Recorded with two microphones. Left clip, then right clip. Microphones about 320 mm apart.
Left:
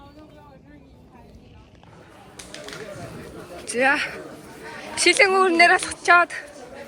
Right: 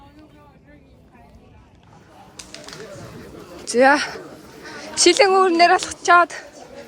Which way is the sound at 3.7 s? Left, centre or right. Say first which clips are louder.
Right 5 dB; centre.